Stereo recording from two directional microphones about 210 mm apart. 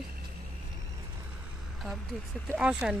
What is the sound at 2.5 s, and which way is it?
Speech, 5° right (ahead or behind).